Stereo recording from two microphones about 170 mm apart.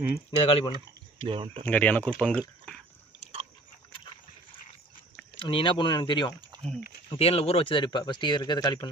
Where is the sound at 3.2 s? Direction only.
35° right (ahead or behind).